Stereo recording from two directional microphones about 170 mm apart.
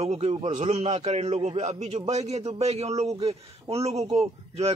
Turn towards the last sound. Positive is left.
turn(degrees=-35)  # may be behind; listen again after turning